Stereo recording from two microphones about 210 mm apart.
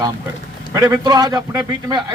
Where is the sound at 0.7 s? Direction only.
20° right (ahead or behind).